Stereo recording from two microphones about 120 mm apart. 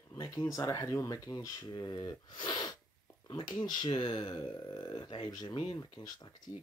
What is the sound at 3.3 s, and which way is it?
Speech, 35° left (ahead or behind).